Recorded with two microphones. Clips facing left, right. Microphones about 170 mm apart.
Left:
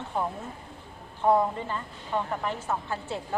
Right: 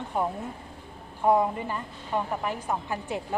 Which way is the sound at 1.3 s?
10° right (ahead or behind).